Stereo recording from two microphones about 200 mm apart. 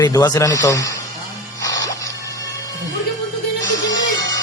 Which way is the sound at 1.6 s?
15° left (ahead or behind).